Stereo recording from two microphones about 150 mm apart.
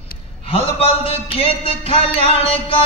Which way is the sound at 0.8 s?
40° left (ahead or behind).